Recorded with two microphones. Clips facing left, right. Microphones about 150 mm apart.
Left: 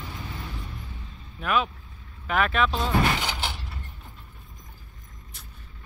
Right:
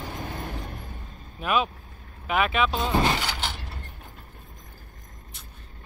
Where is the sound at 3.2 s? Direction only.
10° left (ahead or behind).